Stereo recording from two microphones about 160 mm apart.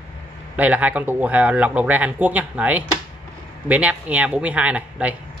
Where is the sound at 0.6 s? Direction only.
10° right (ahead or behind).